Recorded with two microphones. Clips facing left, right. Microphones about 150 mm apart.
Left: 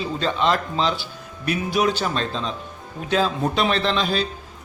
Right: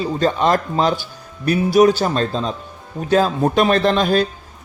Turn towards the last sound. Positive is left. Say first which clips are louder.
# right 6 dB
turn(degrees=-50)  # may be behind; listen again after turning